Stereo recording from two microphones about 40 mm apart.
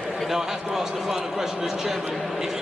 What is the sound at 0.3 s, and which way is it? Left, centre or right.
A man's voice, centre.